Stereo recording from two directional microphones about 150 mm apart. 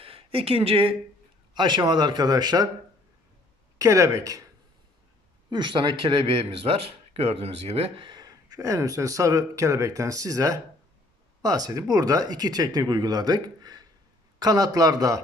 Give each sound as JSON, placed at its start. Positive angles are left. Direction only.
{"t": 0.0, "sound": "speech", "side_deg": -40}
{"t": 1.5, "sound": "speech", "side_deg": -30}
{"t": 3.8, "sound": "speech", "side_deg": -20}
{"t": 5.5, "sound": "speech", "side_deg": -30}